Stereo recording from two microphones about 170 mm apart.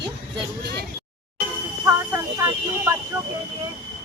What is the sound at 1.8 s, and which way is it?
Speech, 15° right (ahead or behind).